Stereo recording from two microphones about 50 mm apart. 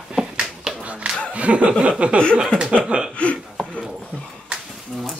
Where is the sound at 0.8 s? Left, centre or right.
Right.